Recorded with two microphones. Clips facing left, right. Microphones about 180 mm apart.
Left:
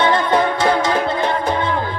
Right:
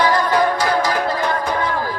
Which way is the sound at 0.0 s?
25° left (ahead or behind).